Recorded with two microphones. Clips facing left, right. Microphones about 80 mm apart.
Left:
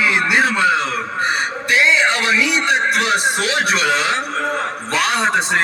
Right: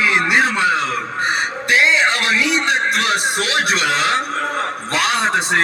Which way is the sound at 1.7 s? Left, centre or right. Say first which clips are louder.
Even; right.